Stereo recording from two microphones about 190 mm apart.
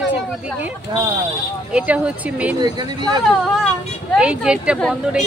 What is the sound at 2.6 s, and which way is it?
Speech, 20° right (ahead or behind).